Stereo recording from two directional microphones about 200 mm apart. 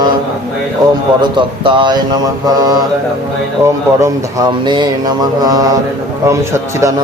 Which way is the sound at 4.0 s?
20° right (ahead or behind).